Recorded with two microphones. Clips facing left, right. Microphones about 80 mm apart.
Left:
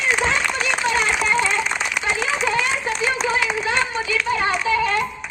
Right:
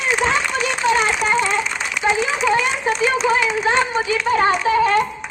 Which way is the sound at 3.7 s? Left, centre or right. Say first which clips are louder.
Right 3 dB; right.